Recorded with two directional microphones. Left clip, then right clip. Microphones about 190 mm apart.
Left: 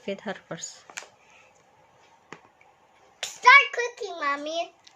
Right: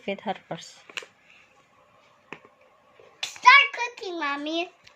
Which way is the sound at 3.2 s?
40° left (ahead or behind).